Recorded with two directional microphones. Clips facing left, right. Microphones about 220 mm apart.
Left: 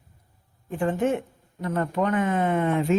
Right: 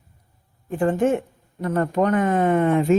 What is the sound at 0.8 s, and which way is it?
Speech, 45° right (ahead or behind).